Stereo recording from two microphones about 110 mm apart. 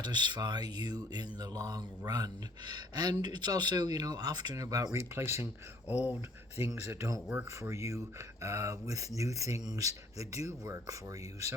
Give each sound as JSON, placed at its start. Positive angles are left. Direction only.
{"t": 0.0, "sound": "speech", "side_deg": -40}
{"t": 5.1, "sound": "speech", "side_deg": -20}
{"t": 5.9, "sound": "speech", "side_deg": -10}
{"t": 6.6, "sound": "speech", "side_deg": -30}